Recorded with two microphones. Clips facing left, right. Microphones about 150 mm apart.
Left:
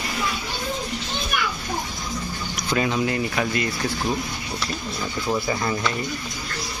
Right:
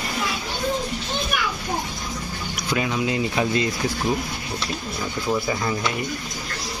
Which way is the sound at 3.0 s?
20° right (ahead or behind).